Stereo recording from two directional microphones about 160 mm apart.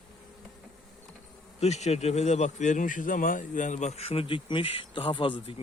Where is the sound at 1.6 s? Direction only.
45° left (ahead or behind).